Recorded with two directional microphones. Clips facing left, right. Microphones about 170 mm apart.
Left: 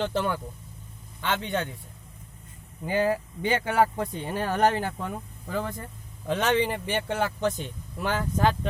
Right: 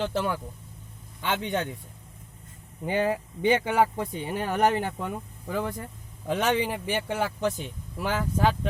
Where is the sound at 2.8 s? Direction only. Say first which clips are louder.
Left 1 dB; 20° right (ahead or behind).